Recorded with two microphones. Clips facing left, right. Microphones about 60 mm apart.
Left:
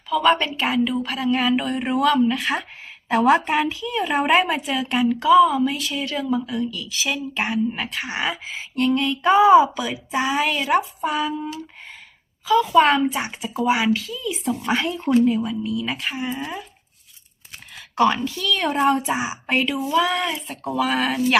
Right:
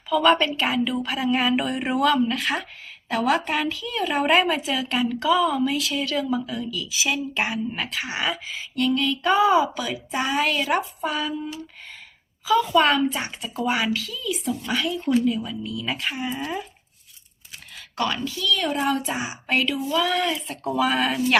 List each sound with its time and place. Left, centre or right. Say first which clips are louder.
0.1 s a woman's voice: even; centre
3.1 s a woman's voice: left 5 dB; left
4.3 s a woman's voice: even; centre
8.3 s a woman's voice: even; left
9.2 s speech: left 6 dB; centre
12.5 s a woman's voice: left 2 dB; centre
12.7 s speech: left 3 dB; centre
14.7 s speech: left 3 dB; left
15.4 s a woman's voice: left 4 dB; centre
17.9 s a woman's voice: left 7 dB; left
18.3 s a woman's voice: left 1 dB; left
18.6 s a woman's voice: left 7 dB; left; by 20.1 s centre
20.5 s a woman's voice: left 2 dB; centre